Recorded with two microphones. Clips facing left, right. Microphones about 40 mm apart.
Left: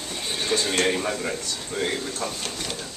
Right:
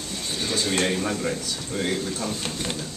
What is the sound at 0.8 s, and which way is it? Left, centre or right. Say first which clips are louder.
Speech: even; centre.